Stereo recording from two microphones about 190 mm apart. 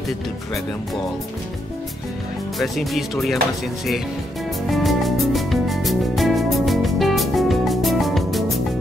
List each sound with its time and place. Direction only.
2.6 s speech: centre (ahead or behind)
4.6 s music: centre (ahead or behind)